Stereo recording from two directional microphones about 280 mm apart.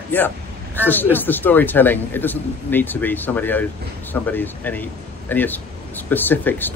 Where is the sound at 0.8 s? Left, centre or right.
Centre.